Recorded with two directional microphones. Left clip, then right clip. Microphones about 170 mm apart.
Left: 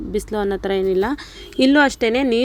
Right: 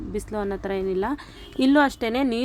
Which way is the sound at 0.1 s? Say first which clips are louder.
Left 7 dB; 25° left (ahead or behind).